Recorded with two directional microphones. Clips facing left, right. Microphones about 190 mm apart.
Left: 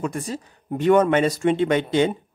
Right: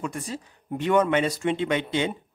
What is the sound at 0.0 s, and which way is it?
Speech, 45° left (ahead or behind).